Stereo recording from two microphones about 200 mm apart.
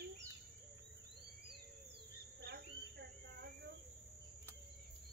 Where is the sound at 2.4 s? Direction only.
55° right (ahead or behind).